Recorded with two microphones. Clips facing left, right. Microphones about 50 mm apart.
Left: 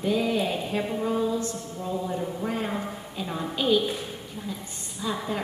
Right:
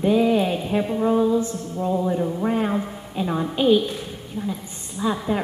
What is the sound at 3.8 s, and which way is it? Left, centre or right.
Speech, centre.